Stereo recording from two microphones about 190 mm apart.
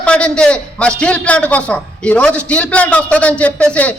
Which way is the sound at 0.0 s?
5° left (ahead or behind).